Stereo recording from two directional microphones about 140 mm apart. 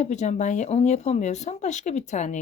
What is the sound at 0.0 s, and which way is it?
Speech, 55° left (ahead or behind).